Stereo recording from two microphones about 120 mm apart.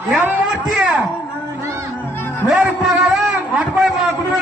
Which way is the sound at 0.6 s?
5° right (ahead or behind).